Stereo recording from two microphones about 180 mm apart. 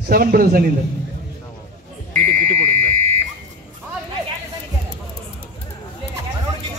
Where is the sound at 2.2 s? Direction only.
40° right (ahead or behind).